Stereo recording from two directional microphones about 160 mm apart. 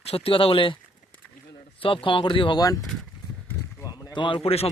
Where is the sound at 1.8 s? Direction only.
35° left (ahead or behind).